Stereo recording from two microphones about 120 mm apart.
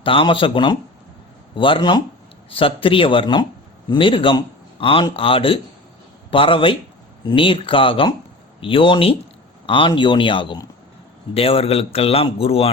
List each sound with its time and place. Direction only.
0.0 s a man's voice: 45° left (ahead or behind)